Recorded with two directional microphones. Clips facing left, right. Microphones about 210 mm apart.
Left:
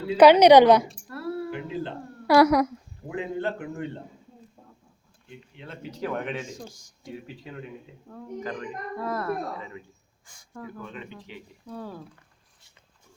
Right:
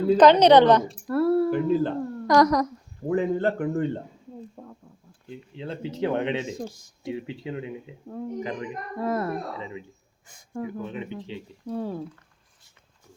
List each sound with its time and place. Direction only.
0.2 s a woman's voice: 10° left (ahead or behind)
1.0 s a sound: 55° right (ahead or behind)
2.2 s a woman's voice: 10° left (ahead or behind)
3.1 s a man's voice: 50° right (ahead or behind)
4.6 s a sound: 60° right (ahead or behind)
5.5 s speech: 30° right (ahead or behind)